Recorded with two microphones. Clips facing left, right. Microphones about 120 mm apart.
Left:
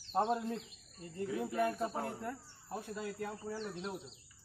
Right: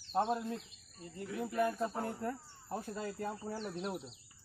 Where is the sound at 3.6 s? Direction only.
5° right (ahead or behind).